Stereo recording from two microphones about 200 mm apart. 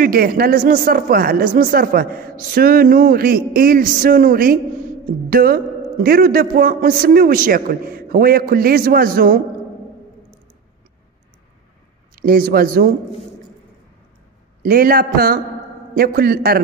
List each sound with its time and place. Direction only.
0.0 s speech: 45° right (ahead or behind)
12.2 s speech: 45° right (ahead or behind)
14.6 s speech: 45° right (ahead or behind)